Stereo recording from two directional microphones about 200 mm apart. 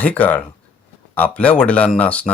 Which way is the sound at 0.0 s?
5° left (ahead or behind).